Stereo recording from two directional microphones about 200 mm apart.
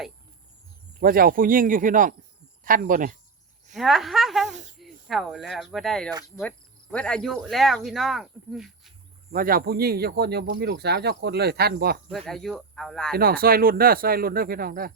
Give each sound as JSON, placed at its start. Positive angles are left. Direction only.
{"t": 0.9, "sound": "speech", "side_deg": -45}
{"t": 3.8, "sound": "speech", "side_deg": 0}
{"t": 4.4, "sound": "snake", "side_deg": -35}
{"t": 5.0, "sound": "speech", "side_deg": 0}
{"t": 9.3, "sound": "speech", "side_deg": -45}
{"t": 12.1, "sound": "speech", "side_deg": 0}
{"t": 13.1, "sound": "speech", "side_deg": -50}